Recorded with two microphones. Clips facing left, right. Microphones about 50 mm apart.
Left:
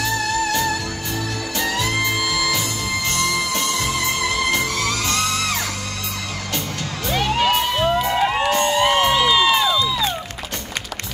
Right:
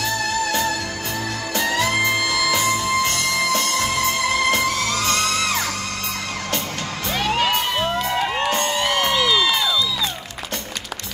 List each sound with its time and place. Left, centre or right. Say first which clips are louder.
1.9 s music: right 2 dB; centre
5.0 s music: right 1 dB; right
7.1 s music: left 2 dB; centre
7.7 s crowd: left 3 dB; centre; by 10.1 s left